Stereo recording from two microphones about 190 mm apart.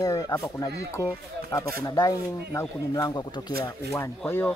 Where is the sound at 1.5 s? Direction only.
15° left (ahead or behind).